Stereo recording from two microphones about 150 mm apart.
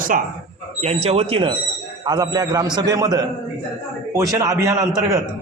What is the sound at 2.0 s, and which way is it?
A man's voice, 25° right (ahead or behind).